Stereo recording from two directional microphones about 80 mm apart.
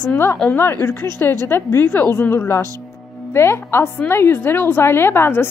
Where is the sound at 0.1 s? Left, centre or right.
Left.